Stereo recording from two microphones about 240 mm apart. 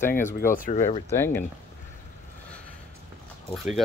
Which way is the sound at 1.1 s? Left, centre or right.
Centre.